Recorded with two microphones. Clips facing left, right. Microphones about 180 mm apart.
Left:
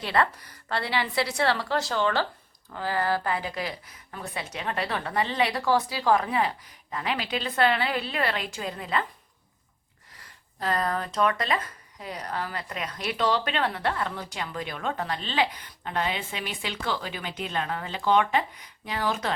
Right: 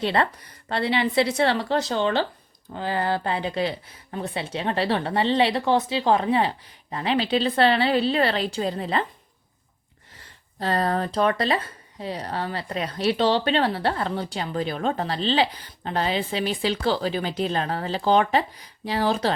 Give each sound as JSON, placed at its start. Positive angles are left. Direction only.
{"t": 0.0, "sound": "speech", "side_deg": -25}
{"t": 10.2, "sound": "speech", "side_deg": -30}